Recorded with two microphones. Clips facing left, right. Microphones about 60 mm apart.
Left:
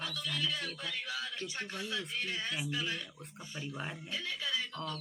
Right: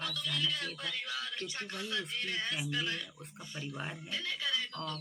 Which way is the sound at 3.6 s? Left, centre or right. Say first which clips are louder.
Even; centre.